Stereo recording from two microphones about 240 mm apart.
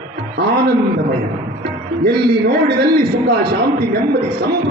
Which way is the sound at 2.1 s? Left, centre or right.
Right.